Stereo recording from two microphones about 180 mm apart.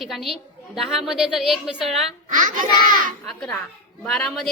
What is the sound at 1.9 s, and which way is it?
A child's voice, 45° right (ahead or behind).